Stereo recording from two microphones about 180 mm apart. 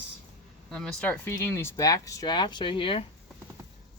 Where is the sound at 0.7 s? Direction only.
5° left (ahead or behind); by 3.0 s 30° left (ahead or behind).